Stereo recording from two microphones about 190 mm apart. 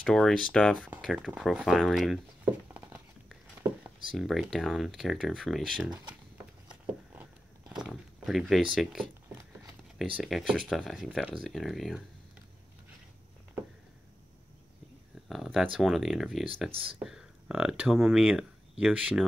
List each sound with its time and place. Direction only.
0.0 s speech: 5° left (ahead or behind)
2.7 s a sound: 10° right (ahead or behind)
4.1 s speech: centre (ahead or behind)
5.9 s speech: 25° right (ahead or behind)
6.7 s a sound: 5° right (ahead or behind)
8.7 s speech: centre (ahead or behind)
10.2 s speech: centre (ahead or behind)
15.2 s speech: centre (ahead or behind)